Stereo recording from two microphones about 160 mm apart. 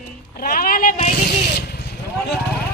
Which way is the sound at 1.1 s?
85° left.